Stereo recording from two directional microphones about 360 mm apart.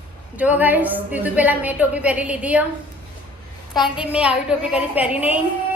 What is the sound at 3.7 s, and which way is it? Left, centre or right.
A woman's voice, centre.